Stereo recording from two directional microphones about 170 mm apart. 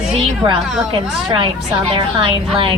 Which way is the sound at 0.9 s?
30° right (ahead or behind).